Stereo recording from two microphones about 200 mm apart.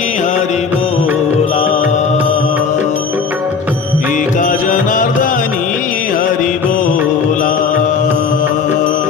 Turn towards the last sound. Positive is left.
turn(degrees=40)  # may be behind; listen again after turning